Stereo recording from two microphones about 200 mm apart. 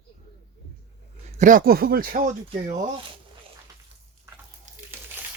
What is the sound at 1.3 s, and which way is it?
Speech, 40° right (ahead or behind).